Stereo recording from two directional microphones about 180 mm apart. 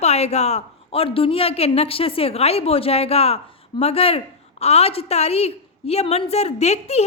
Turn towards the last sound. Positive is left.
turn(degrees=35)  # may be behind; listen again after turning